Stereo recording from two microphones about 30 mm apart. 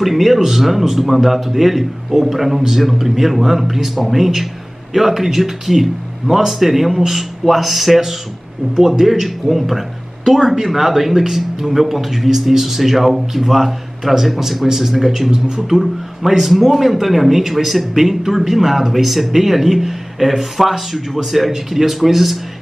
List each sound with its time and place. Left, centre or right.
0.0 s a man's voice: centre
15.3 s speech: right
15.6 s a man's voice: centre